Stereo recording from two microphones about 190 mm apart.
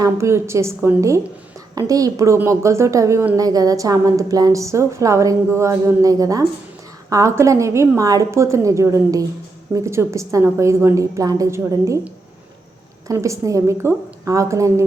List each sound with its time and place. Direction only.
0.0 s a woman's voice: 15° right (ahead or behind)